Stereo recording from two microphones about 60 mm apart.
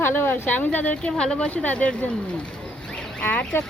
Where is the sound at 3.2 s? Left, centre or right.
Left.